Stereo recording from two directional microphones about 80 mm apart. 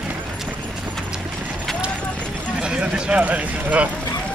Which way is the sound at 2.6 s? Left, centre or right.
Centre.